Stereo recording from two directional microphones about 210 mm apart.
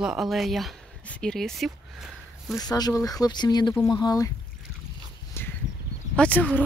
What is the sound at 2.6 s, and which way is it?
Speech, 15° left (ahead or behind).